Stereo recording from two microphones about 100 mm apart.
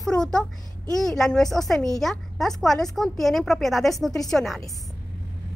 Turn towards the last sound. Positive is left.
turn(degrees=0)  # may be behind; listen again after turning